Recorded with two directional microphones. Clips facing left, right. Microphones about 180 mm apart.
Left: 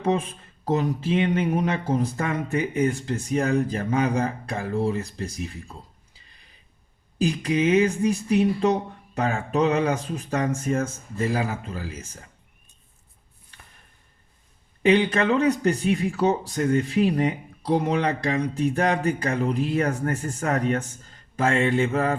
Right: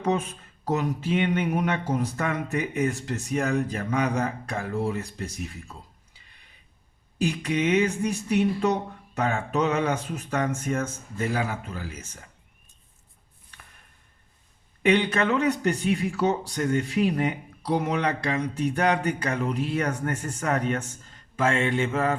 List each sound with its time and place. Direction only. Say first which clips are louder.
0.0 s speech: left 2 dB; 30° left (ahead or behind)
7.2 s speech: left 3 dB; 35° left (ahead or behind)
14.8 s speech: left 3 dB; 30° left (ahead or behind)